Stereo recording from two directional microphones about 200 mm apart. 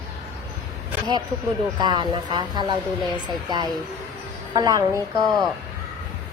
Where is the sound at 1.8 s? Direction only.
20° right (ahead or behind).